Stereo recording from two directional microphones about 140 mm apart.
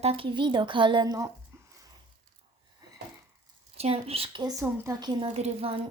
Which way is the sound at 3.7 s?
45° right (ahead or behind).